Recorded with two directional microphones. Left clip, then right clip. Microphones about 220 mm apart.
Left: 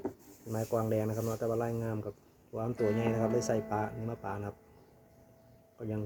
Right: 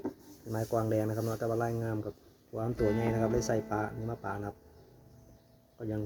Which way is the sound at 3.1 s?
5° left (ahead or behind).